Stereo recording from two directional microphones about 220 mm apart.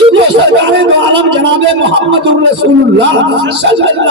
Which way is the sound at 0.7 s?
50° right (ahead or behind).